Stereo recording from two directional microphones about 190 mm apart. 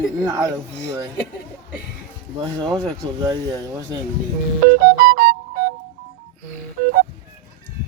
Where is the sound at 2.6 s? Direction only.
20° right (ahead or behind).